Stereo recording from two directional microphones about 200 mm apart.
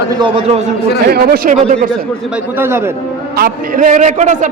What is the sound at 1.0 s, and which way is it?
Speech, 50° right (ahead or behind).